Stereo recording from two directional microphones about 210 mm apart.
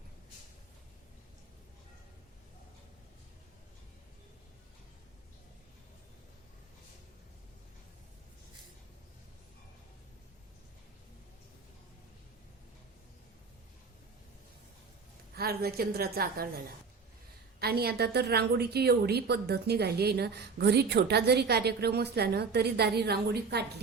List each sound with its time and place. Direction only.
15.4 s a woman's voice: 45° right (ahead or behind)
17.6 s a woman's voice: 50° right (ahead or behind)